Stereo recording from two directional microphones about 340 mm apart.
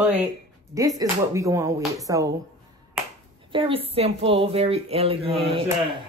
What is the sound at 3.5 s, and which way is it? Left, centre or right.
A woman's voice, centre.